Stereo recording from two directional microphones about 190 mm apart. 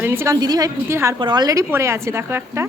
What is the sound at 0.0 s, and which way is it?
A woman's voice, 10° right (ahead or behind).